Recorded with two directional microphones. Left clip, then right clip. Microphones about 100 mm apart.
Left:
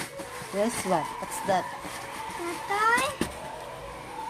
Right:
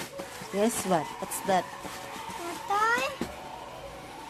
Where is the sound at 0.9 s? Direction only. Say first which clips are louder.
Left 1 dB; 40° right (ahead or behind).